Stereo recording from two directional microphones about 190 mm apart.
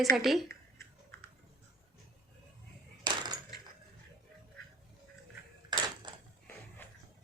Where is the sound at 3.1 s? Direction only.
25° right (ahead or behind).